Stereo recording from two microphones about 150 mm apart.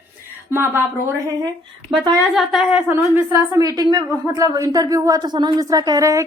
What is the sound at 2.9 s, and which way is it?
Speech, 15° right (ahead or behind).